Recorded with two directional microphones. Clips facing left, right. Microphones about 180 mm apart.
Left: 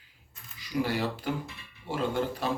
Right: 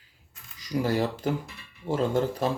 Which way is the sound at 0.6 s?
40° right (ahead or behind).